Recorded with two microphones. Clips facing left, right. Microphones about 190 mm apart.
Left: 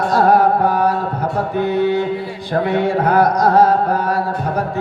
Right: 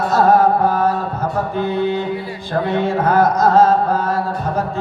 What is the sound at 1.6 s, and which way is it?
Music, 15° left (ahead or behind).